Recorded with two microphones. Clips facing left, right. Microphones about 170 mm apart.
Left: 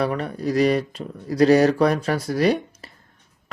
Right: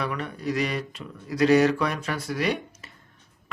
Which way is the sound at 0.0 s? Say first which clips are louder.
Left 6 dB; 35° left (ahead or behind).